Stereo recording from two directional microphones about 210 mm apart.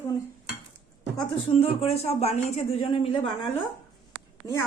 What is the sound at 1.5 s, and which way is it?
Speech, 25° left (ahead or behind).